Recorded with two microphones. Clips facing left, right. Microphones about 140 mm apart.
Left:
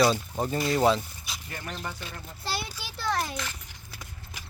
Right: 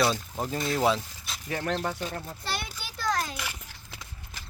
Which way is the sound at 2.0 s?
40° right (ahead or behind).